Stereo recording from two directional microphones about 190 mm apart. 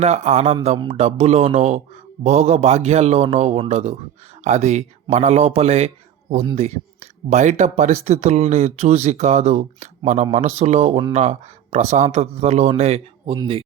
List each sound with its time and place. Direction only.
0.0 s a man's voice: 35° right (ahead or behind)
13.3 s speech: 20° right (ahead or behind)